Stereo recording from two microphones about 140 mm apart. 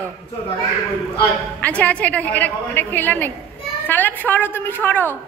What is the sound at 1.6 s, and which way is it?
A woman's voice, 10° left (ahead or behind).